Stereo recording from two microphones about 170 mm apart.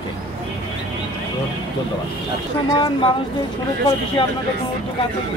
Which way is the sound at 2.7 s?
30° left (ahead or behind).